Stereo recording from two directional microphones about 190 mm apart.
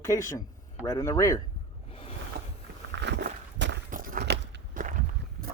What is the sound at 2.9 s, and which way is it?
Walk, 65° right (ahead or behind).